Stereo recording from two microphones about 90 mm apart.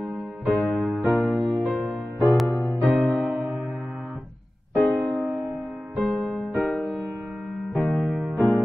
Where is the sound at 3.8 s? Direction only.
15° right (ahead or behind).